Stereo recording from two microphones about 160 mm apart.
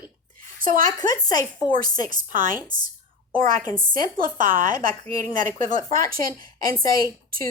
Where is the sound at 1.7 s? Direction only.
60° right (ahead or behind).